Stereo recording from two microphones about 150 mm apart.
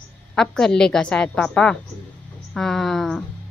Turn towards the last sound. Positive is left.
turn(degrees=0)  # may be behind; listen again after turning